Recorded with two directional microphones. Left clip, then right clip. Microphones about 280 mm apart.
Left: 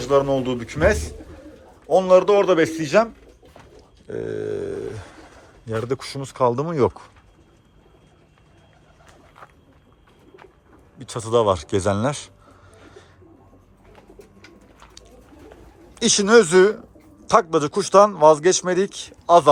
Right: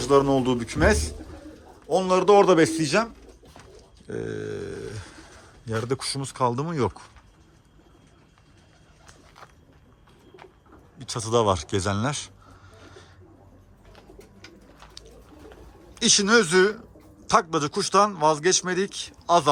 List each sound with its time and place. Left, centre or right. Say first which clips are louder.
0.0 s a man's voice: left 1 dB; centre
4.0 s grunt: left 5 dB; centre
5.6 s a man's voice: left 2 dB; centre
9.4 s vehicle: left 4 dB; centre
10.9 s a man's voice: left 4 dB; centre
12.7 s bird: left 2 dB; centre
14.8 s bird: right 1 dB; centre
16.0 s a man's voice: left 5 dB; centre